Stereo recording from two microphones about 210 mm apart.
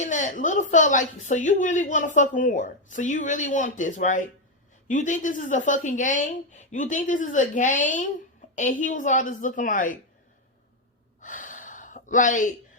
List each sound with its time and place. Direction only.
0.0 s a woman's voice: 35° left (ahead or behind)
11.2 s gasp: 40° left (ahead or behind)